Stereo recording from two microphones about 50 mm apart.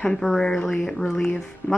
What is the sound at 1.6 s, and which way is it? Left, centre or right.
Speech, left.